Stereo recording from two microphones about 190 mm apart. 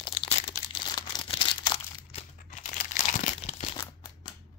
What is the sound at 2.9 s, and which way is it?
Crumpling, 40° left (ahead or behind).